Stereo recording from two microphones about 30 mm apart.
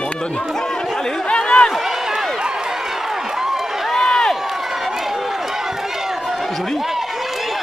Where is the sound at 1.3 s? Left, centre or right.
Left.